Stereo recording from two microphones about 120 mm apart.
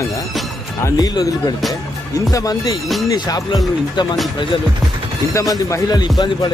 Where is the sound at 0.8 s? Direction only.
30° left (ahead or behind).